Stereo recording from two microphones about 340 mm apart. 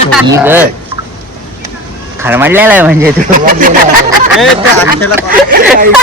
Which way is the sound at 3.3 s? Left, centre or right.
Right.